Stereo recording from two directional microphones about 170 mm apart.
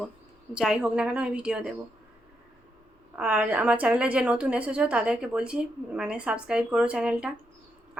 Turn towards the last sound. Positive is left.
turn(degrees=-5)  # may be behind; listen again after turning